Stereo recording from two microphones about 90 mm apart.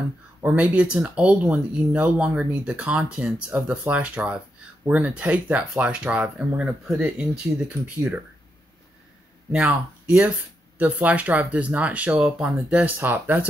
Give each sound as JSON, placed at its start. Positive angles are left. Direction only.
{"t": 0.4, "sound": "speech", "side_deg": -15}
{"t": 9.5, "sound": "speech", "side_deg": -10}
{"t": 12.9, "sound": "speech", "side_deg": -20}